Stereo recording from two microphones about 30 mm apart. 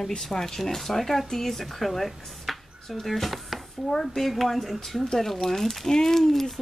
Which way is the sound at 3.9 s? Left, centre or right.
Centre.